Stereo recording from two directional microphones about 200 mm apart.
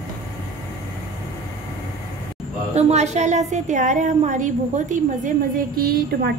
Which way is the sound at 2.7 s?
35° right (ahead or behind).